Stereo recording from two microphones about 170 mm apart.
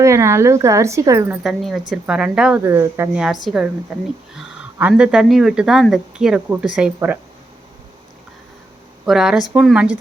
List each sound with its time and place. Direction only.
0.0 s speech: 15° right (ahead or behind)
1.5 s speech: centre (ahead or behind)
3.4 s speech: 5° right (ahead or behind)
9.0 s speech: 5° right (ahead or behind)